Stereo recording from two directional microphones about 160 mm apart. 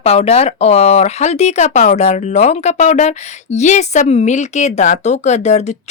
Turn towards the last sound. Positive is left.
turn(degrees=45)  # may be behind; listen again after turning